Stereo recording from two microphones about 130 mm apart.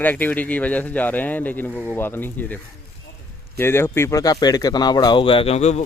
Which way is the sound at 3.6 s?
20° left (ahead or behind).